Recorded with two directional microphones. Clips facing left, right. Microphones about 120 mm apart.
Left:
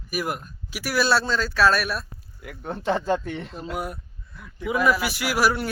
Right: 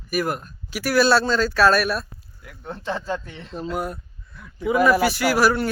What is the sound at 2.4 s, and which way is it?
Speech, 65° left (ahead or behind).